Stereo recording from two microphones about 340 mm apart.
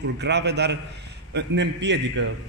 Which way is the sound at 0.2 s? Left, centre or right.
Right.